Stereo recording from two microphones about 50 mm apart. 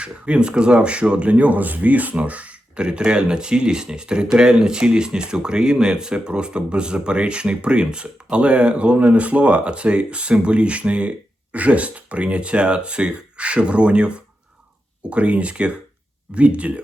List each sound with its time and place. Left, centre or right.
0.0 s speech: right